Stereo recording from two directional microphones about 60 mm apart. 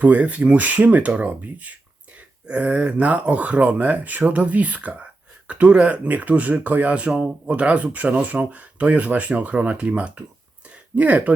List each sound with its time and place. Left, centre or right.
0.0 s speech: right